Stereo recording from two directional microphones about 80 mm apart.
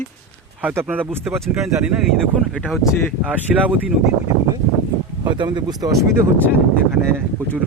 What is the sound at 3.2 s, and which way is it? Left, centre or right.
Speech, centre.